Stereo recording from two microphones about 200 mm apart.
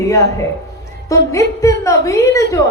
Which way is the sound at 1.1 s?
15° left (ahead or behind).